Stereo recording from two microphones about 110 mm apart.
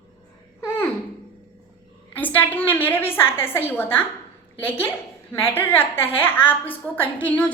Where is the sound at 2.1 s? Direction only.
15° left (ahead or behind).